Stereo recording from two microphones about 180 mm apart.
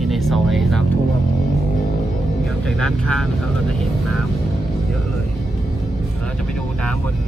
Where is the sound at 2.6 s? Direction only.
5° left (ahead or behind).